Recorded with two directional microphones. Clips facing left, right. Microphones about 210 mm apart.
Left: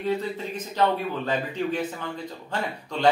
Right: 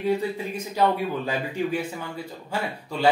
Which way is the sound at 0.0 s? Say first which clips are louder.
Right 2 dB; 10° right (ahead or behind).